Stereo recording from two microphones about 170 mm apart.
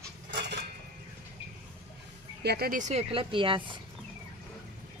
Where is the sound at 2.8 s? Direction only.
35° right (ahead or behind).